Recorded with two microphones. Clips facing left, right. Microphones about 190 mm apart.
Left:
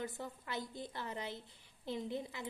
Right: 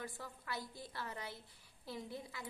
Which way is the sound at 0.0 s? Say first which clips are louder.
Left 5 dB; 20° left (ahead or behind).